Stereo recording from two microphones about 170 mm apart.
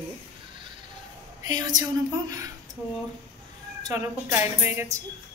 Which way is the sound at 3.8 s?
15° right (ahead or behind).